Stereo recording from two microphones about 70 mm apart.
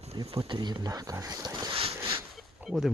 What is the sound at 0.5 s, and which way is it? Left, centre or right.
Speech, right.